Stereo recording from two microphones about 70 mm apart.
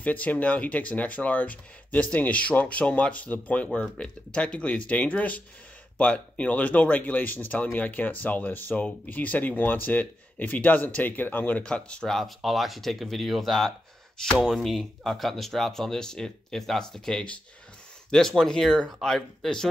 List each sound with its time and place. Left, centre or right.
0.0 s speech: left; by 19.7 s centre